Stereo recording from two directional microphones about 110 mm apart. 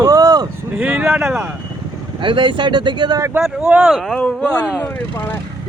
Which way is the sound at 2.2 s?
50° right (ahead or behind).